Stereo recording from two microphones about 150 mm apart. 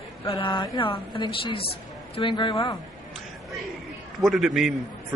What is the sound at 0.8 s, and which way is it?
A woman's voice, 35° left (ahead or behind).